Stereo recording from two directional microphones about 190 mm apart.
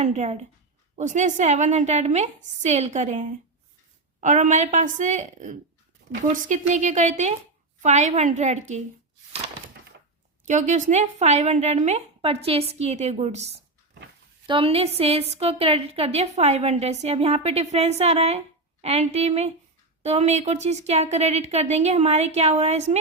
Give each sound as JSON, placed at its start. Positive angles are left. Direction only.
{"t": 0.0, "sound": "a woman's voice", "side_deg": -35}
{"t": 10.4, "sound": "a woman's voice", "side_deg": -40}